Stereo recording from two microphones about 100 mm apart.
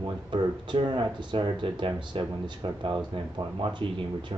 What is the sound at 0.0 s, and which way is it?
Speech, 55° right (ahead or behind).